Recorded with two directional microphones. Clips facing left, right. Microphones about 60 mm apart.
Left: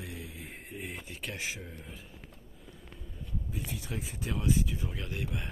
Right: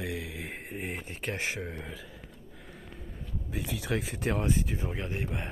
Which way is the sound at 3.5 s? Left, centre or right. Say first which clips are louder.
Right 9 dB; right.